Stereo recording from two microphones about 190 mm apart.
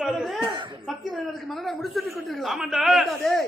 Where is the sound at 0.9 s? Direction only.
Centre (ahead or behind).